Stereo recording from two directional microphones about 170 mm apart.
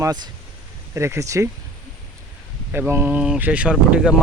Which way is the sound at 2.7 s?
10° right (ahead or behind).